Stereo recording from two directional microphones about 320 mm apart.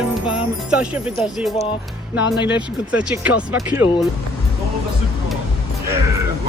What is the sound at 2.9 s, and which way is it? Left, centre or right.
Speech, centre.